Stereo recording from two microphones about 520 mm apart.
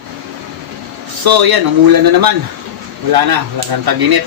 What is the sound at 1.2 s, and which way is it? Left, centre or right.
A man's voice, right.